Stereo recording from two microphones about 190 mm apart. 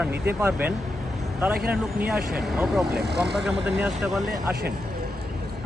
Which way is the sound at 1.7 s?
5° right (ahead or behind).